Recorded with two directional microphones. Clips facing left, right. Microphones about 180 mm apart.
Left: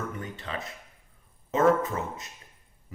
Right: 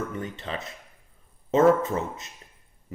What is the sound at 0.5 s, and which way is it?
Speech, 25° right (ahead or behind).